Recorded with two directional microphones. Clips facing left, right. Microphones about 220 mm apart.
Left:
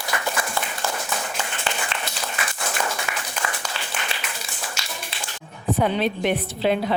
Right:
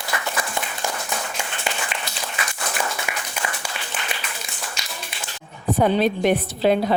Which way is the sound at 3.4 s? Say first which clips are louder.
Even; 20° right (ahead or behind).